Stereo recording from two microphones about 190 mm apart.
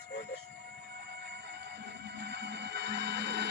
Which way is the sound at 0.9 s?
60° right (ahead or behind).